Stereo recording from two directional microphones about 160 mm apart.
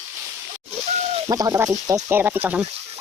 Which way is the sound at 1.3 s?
25° right (ahead or behind).